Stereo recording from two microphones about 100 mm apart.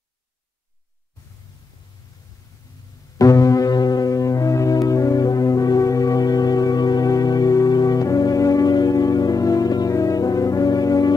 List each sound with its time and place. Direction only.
3.2 s music: 35° left (ahead or behind)